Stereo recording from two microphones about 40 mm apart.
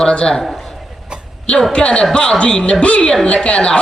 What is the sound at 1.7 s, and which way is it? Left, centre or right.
A woman's voice, left.